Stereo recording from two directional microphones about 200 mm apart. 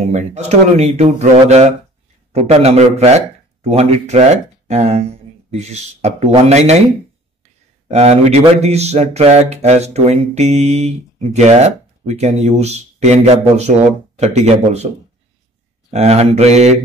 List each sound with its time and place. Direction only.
0.1 s speech: 35° right (ahead or behind)
7.9 s speech: 30° right (ahead or behind)
15.9 s speech: 30° right (ahead or behind)